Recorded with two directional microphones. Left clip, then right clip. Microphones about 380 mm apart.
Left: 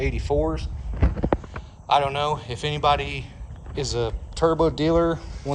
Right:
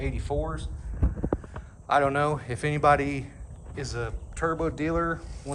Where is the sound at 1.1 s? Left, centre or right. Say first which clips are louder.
Left 7 dB; left.